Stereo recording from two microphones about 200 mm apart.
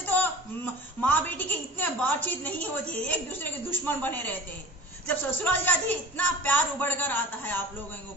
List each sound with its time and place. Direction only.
0.0 s a woman's voice: 10° left (ahead or behind)
3.8 s speech: 10° left (ahead or behind)